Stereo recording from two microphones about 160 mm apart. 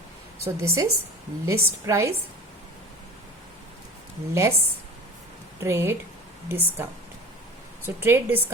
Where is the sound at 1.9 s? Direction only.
20° right (ahead or behind).